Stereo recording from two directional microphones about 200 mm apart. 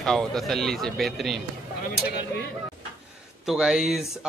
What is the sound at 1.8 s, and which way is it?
Speech, 55° left (ahead or behind).